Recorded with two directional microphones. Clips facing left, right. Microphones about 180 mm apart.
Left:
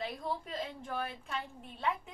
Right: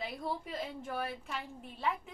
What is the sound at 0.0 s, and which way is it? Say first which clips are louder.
A woman's voice: left 1 dB; 5° right (ahead or behind).